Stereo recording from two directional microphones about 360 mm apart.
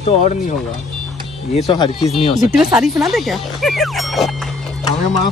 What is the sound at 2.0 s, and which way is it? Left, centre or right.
Speech, centre.